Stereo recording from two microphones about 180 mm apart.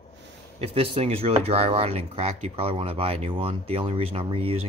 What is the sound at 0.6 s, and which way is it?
Speech, 30° right (ahead or behind).